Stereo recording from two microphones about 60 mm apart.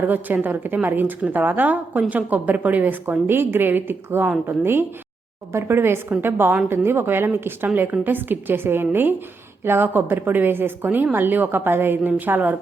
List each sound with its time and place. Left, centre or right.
0.0 s a woman's voice: right